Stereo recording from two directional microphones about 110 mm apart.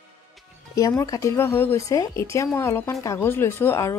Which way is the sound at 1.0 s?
30° left (ahead or behind).